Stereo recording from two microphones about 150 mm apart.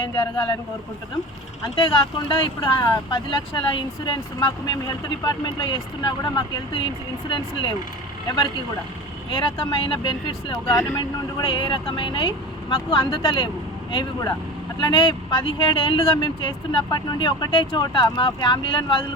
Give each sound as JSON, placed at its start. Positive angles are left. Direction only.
{"t": 1.6, "sound": "speech", "side_deg": 35}
{"t": 9.3, "sound": "speech", "side_deg": 30}
{"t": 10.7, "sound": "speech", "side_deg": 20}